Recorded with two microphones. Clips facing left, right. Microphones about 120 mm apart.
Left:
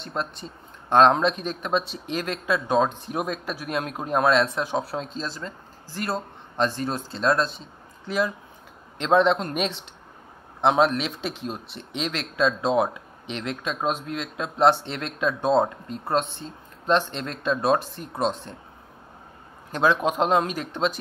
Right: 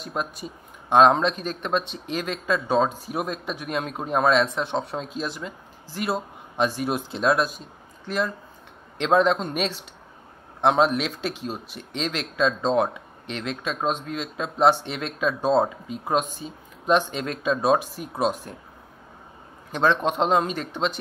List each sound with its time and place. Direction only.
0.0 s speech: 10° right (ahead or behind)
8.1 s a man's voice: 5° left (ahead or behind)
19.7 s speech: 5° left (ahead or behind)